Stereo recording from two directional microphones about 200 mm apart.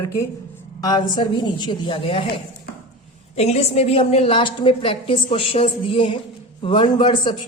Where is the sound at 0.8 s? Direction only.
20° left (ahead or behind).